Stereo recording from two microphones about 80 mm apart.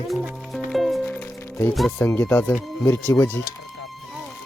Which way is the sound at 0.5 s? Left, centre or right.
Centre.